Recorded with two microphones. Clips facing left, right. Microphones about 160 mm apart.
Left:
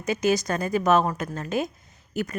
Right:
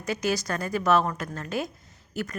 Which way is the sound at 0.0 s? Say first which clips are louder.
Left 4 dB; 20° left (ahead or behind).